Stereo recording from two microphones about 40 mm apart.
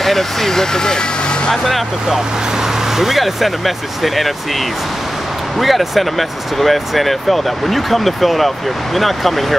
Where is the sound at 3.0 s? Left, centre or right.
Centre.